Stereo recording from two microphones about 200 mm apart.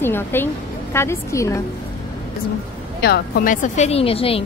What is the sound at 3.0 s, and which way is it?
Speech, 50° left (ahead or behind).